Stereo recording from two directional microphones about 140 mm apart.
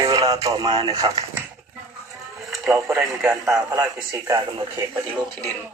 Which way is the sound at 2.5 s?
Centre (ahead or behind).